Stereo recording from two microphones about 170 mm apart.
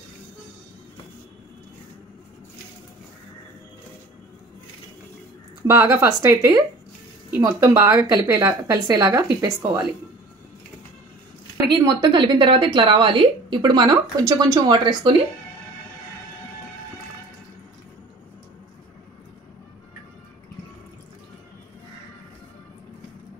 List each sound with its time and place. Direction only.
5.7 s a woman's voice: 15° right (ahead or behind)
11.7 s a woman's voice: 25° right (ahead or behind)